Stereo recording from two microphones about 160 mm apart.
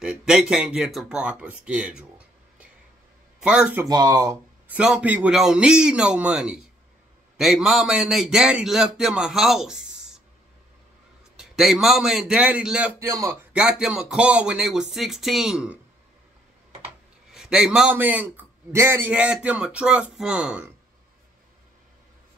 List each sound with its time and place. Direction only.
0.0 s speech: 5° right (ahead or behind)
3.3 s speech: 5° right (ahead or behind)
3.9 s speech: 25° right (ahead or behind)
4.6 s a man's voice: 5° right (ahead or behind)
11.3 s a man's voice: centre (ahead or behind)
13.0 s speech: 20° right (ahead or behind)
13.5 s a man's voice: 5° right (ahead or behind)
17.3 s a man's voice: 5° right (ahead or behind)